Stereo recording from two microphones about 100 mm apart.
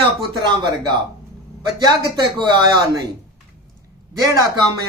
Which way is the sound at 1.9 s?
45° right (ahead or behind).